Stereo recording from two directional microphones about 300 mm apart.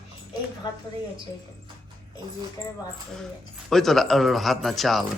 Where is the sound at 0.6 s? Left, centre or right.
Centre.